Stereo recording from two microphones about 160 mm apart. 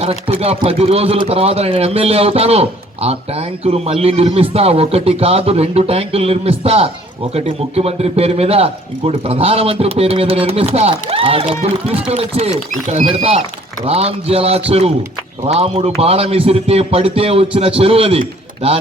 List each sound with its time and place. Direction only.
0.0 s a man's voice: 40° right (ahead or behind)
13.8 s a man's voice: 40° right (ahead or behind)